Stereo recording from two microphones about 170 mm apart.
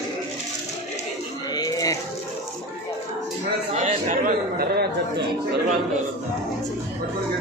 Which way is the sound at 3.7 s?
45° right (ahead or behind).